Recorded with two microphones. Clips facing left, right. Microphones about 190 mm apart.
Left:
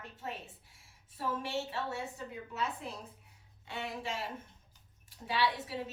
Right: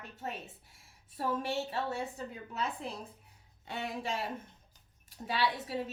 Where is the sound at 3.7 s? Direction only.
40° right (ahead or behind).